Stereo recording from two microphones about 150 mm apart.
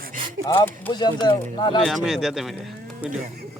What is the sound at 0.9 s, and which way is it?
Speech, 30° left (ahead or behind).